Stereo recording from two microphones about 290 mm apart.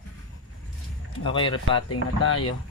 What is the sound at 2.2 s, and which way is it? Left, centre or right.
Speech, left.